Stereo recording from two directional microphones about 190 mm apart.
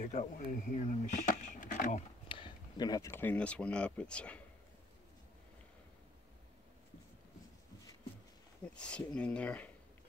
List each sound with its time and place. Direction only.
0.0 s speech: 40° left (ahead or behind)
2.2 s speech: 25° left (ahead or behind); by 4.4 s 5° left (ahead or behind)
8.6 s speech: 5° left (ahead or behind)